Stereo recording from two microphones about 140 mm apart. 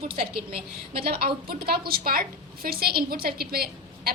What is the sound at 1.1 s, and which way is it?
A woman's voice, 90° right.